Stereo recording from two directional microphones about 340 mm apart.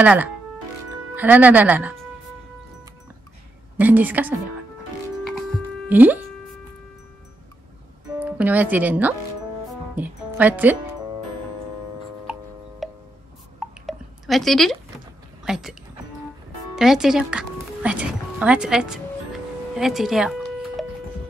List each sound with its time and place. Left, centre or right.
0.0 s speech: centre
3.7 s speech: centre
5.9 s speech: centre
8.2 s speech: centre
12.8 s music: centre
13.6 s a sound: centre
15.4 s speech: centre
16.7 s speech: centre